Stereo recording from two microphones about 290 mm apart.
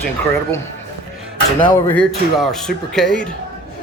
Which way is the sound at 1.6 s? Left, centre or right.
Centre.